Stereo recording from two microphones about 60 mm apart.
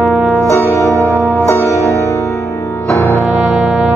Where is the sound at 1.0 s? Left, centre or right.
Left.